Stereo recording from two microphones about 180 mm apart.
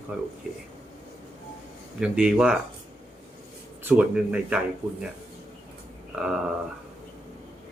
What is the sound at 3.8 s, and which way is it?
Speech, 5° right (ahead or behind).